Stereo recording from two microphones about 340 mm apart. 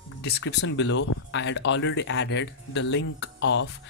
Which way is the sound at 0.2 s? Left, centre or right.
Left.